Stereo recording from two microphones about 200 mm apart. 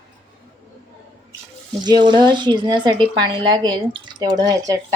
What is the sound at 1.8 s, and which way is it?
Speech, 20° right (ahead or behind).